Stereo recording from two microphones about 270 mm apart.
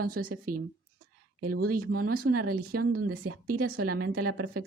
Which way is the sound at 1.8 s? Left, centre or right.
Right.